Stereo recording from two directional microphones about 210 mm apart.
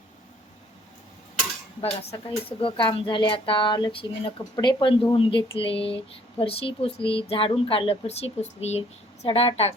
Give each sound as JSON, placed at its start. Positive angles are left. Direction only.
{"t": 1.8, "sound": "speech", "side_deg": 30}